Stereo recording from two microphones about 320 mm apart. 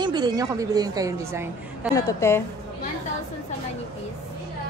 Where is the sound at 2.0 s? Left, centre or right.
Centre.